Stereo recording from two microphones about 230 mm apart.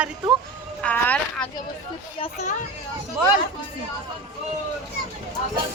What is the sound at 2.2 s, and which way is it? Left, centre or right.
Speech, left.